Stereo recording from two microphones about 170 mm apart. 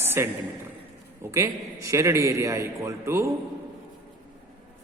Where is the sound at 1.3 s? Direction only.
15° right (ahead or behind).